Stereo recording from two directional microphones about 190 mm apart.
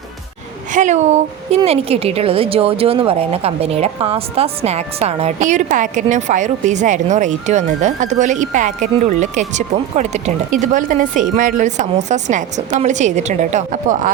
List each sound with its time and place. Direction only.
0.7 s a woman's voice: 40° right (ahead or behind)